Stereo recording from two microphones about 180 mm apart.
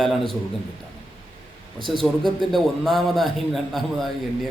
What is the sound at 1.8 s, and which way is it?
Speech, 25° right (ahead or behind).